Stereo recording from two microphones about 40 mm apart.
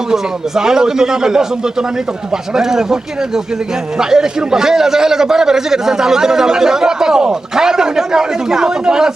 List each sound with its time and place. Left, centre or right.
0.1 s a man's voice: centre